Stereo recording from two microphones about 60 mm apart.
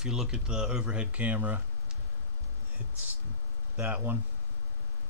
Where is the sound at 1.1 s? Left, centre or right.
Right.